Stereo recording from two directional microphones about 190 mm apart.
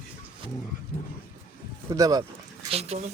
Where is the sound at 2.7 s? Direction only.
35° right (ahead or behind).